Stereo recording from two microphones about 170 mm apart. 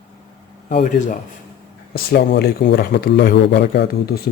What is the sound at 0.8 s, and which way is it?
Speech, 50° left (ahead or behind).